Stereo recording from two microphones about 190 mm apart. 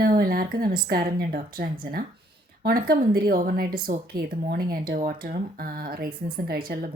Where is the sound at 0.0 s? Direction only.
45° right (ahead or behind).